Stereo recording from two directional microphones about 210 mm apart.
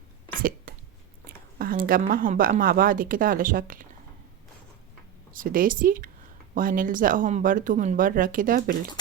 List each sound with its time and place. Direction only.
0.3 s a sound: 45° right (ahead or behind)
1.3 s speech: 45° right (ahead or behind)
5.3 s speech: 40° right (ahead or behind)